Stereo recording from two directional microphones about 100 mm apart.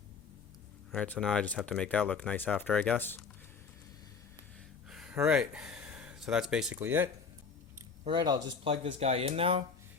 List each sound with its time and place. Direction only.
0.9 s speech: 10° left (ahead or behind)
4.9 s a sound: 5° right (ahead or behind)
5.2 s speech: 10° right (ahead or behind)
6.7 s speech: 20° right (ahead or behind)
8.0 s speech: 50° right (ahead or behind)
8.6 s speech: 75° right (ahead or behind)